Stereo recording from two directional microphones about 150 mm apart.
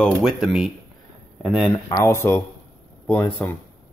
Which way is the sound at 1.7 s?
20° left (ahead or behind).